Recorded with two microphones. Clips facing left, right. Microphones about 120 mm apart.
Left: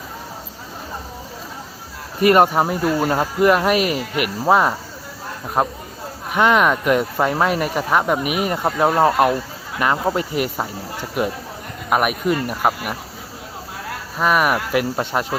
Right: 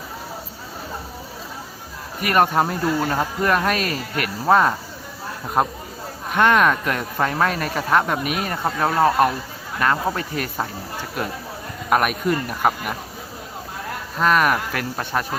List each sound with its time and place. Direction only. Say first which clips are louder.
2.2 s speech: left 5 dB; 20° left (ahead or behind)
2.5 s speech: left 2 dB; 10° left (ahead or behind)
6.3 s speech: left 1 dB; 10° left (ahead or behind)
11.9 s speech: left 1 dB; 10° left (ahead or behind)
14.2 s speech: left 1 dB; 10° left (ahead or behind)